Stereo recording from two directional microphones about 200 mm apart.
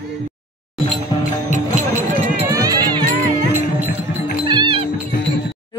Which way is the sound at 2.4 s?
15° right (ahead or behind).